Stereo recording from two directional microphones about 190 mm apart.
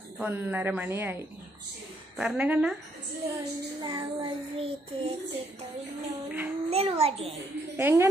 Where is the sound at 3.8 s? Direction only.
20° right (ahead or behind).